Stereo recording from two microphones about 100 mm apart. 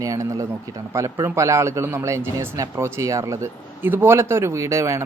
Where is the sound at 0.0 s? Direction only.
35° right (ahead or behind).